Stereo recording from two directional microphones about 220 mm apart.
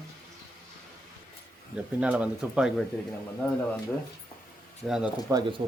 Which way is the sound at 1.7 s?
5° right (ahead or behind).